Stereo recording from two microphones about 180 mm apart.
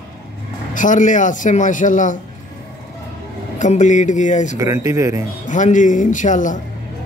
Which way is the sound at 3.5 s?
45° left (ahead or behind).